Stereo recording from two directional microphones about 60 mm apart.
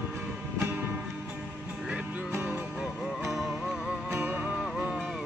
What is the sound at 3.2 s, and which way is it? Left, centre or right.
Music, centre.